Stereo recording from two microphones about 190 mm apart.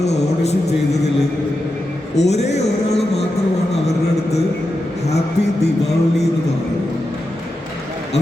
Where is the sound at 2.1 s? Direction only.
35° left (ahead or behind).